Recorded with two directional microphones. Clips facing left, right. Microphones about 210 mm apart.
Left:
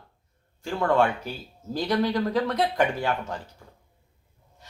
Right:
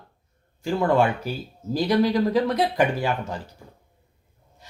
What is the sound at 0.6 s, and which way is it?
A man's voice, 15° right (ahead or behind).